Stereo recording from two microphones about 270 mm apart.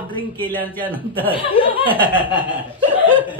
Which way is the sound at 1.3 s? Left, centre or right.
Centre.